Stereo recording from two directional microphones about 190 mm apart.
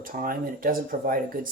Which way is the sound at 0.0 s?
45° right (ahead or behind).